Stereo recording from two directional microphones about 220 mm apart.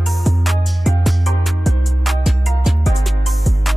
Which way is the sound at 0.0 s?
Centre (ahead or behind).